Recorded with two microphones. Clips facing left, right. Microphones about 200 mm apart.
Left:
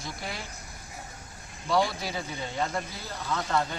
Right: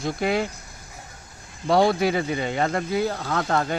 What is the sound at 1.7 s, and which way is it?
Speech, 60° right (ahead or behind).